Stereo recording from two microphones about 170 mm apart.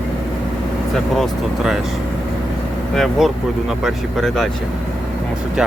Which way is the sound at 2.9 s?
Centre (ahead or behind).